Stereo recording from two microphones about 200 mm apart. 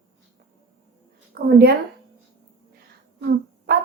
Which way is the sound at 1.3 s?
50° right (ahead or behind).